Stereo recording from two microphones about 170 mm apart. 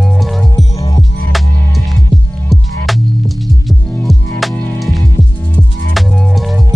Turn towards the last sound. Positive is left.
turn(degrees=0)  # may be behind; listen again after turning